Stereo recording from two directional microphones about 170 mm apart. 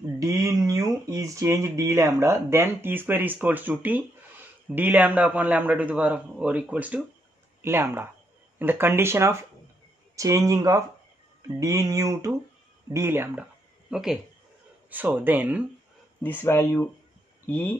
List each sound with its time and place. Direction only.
0.2 s speech: 20° right (ahead or behind)
16.2 s speech: 10° left (ahead or behind)